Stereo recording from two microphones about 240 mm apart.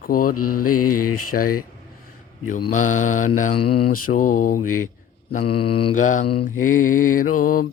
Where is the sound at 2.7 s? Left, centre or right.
Left.